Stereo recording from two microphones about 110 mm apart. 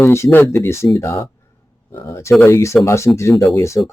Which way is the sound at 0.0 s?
25° left (ahead or behind).